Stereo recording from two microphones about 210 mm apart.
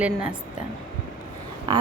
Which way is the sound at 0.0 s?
5° right (ahead or behind).